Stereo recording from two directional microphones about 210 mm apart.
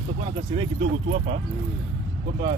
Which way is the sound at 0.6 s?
25° right (ahead or behind).